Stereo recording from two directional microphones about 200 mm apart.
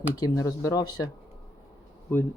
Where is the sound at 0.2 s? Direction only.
15° left (ahead or behind).